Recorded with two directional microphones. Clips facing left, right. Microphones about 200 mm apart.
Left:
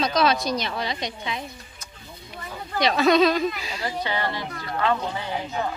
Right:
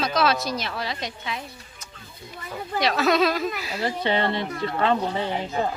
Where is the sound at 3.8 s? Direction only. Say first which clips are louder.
Right 4 dB; 25° right (ahead or behind).